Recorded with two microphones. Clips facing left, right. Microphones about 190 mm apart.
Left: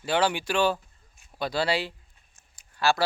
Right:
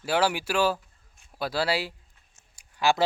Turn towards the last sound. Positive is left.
turn(degrees=-15)  # may be behind; listen again after turning